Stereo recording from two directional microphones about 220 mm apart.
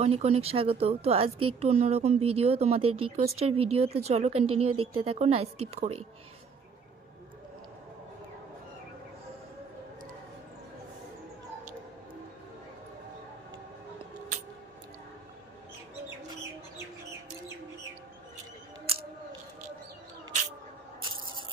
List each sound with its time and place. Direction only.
0.0 s speech: 30° right (ahead or behind)